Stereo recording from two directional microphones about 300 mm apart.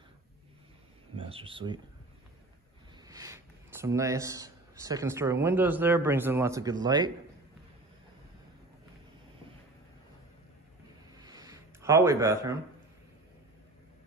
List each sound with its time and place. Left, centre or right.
1.1 s speech: centre
3.1 s a man's voice: centre
11.1 s a sound: centre